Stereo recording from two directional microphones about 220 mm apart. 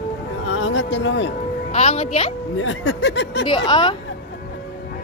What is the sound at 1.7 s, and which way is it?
Speech, 30° left (ahead or behind).